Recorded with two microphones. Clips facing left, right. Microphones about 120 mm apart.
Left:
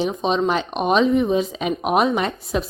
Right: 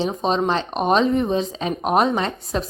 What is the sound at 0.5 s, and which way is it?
Speech, 5° left (ahead or behind).